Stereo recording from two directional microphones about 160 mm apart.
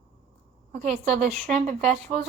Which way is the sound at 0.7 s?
50° right (ahead or behind).